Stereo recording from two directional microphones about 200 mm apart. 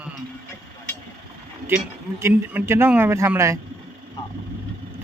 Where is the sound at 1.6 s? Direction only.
10° right (ahead or behind).